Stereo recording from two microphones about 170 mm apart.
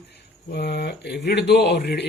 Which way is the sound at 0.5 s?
75° left (ahead or behind).